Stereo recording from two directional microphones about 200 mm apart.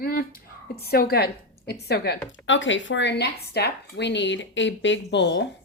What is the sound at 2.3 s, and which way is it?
Speech, 70° left (ahead or behind).